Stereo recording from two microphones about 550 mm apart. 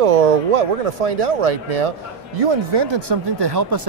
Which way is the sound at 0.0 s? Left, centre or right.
Right.